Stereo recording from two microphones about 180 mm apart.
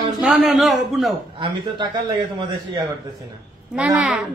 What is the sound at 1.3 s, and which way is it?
Speech, 25° right (ahead or behind).